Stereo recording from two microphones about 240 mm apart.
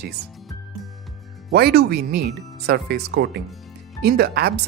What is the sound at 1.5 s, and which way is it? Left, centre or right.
Speech, right.